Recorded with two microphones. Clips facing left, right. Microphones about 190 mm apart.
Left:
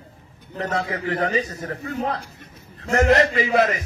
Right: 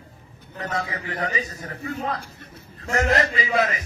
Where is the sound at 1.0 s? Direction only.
60° left (ahead or behind).